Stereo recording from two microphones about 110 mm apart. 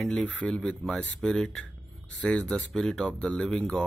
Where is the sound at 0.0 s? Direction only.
5° left (ahead or behind).